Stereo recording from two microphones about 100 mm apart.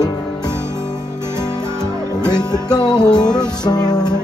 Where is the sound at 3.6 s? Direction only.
45° left (ahead or behind).